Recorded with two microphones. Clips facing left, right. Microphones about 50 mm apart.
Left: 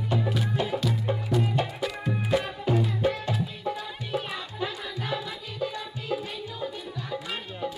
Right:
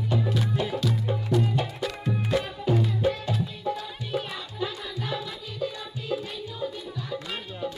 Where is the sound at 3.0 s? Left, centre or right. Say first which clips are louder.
Even; centre.